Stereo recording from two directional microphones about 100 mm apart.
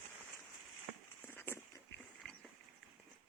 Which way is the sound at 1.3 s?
20° left (ahead or behind).